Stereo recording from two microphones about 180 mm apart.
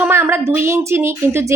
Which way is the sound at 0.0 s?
15° right (ahead or behind).